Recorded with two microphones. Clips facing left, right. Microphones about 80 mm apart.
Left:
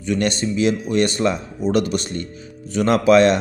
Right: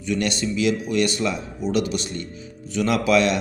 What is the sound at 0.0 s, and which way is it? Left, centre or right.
Speech, left.